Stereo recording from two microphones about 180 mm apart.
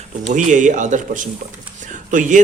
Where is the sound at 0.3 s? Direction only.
45° right (ahead or behind).